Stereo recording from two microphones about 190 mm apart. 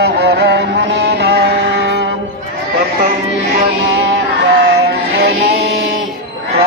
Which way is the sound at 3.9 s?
65° right (ahead or behind).